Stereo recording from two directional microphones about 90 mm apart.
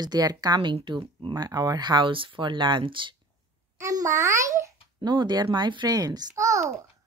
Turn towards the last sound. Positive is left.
turn(degrees=-35)  # may be behind; listen again after turning